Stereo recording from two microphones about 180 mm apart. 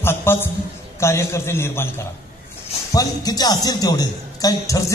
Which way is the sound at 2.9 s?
20° left (ahead or behind).